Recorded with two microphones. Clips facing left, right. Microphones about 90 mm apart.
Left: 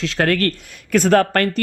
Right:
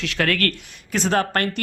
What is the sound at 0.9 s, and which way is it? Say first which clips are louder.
Speech: left 6 dB; 50° left (ahead or behind).